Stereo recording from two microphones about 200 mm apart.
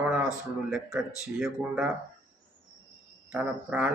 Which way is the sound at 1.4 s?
5° right (ahead or behind).